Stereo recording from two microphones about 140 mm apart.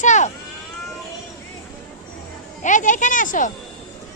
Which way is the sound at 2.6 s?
65° left (ahead or behind).